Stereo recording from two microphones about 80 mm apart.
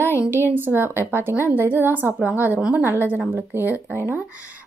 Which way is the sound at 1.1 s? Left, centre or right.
Right.